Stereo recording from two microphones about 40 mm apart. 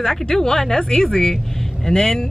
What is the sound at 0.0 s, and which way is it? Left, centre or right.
Speech, centre.